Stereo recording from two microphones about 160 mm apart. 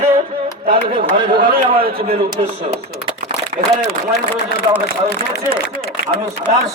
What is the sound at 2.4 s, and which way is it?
Speech, 40° right (ahead or behind).